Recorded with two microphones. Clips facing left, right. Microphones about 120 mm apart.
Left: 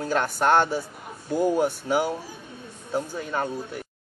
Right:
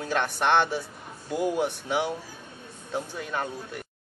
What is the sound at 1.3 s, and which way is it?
Speech, 40° left (ahead or behind).